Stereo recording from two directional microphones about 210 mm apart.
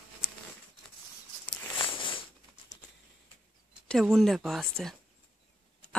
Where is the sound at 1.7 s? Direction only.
25° left (ahead or behind).